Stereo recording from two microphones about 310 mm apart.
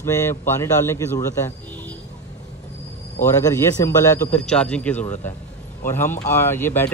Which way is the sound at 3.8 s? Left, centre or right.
Centre.